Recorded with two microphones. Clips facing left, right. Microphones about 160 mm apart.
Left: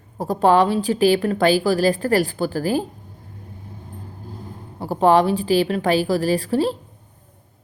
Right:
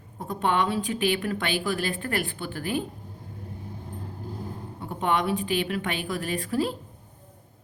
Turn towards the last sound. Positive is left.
turn(degrees=30)  # may be behind; listen again after turning